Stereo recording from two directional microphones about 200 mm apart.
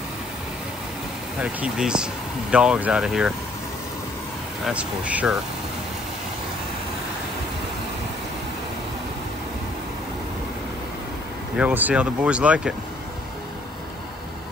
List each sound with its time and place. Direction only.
1.4 s speech: 5° right (ahead or behind)
4.6 s speech: 5° right (ahead or behind)
11.5 s speech: 10° right (ahead or behind)